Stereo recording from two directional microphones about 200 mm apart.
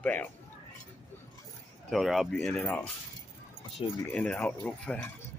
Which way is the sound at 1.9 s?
Centre (ahead or behind).